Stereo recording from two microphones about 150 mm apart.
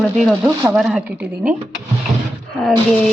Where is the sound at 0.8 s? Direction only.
5° right (ahead or behind).